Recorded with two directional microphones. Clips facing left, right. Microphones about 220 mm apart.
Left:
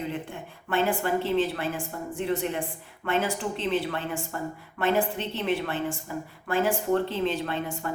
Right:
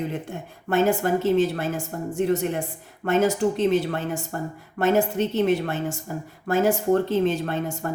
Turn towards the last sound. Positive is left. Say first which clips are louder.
# right 4 dB
turn(degrees=-45)  # may be behind; listen again after turning